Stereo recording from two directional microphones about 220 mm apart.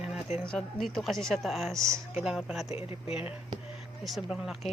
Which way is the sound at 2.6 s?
25° left (ahead or behind).